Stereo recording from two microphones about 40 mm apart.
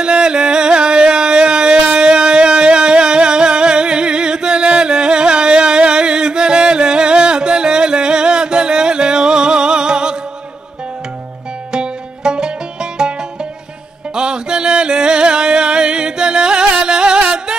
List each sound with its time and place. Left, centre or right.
0.0 s music: right
11.7 s music: centre
14.1 s music: right